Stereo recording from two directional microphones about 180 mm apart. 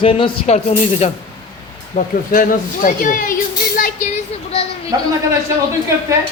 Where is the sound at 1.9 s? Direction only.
50° left (ahead or behind).